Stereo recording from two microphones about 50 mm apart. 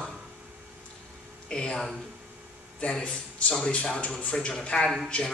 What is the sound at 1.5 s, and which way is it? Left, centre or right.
A woman's voice, centre.